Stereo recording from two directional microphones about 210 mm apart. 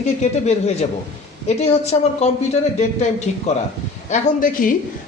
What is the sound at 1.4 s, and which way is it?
Speech, 30° left (ahead or behind).